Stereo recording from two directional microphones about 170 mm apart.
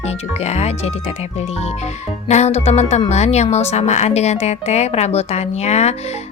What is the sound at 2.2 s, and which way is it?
Speech, 40° left (ahead or behind).